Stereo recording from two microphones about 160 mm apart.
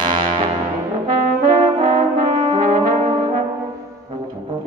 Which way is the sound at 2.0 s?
50° right (ahead or behind).